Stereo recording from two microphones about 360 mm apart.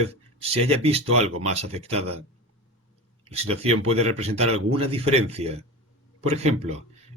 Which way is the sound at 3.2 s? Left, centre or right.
Centre.